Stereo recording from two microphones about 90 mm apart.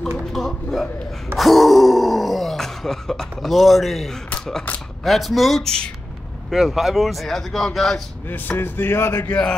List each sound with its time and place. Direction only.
0.2 s speech: centre (ahead or behind)
8.3 s speech: 20° left (ahead or behind)
9.3 s speech: 10° left (ahead or behind)